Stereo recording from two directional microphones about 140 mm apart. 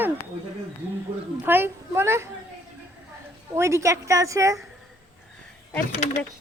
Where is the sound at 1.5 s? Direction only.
15° right (ahead or behind).